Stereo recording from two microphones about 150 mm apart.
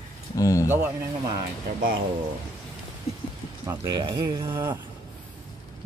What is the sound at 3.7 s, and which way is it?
Speech, 30° right (ahead or behind).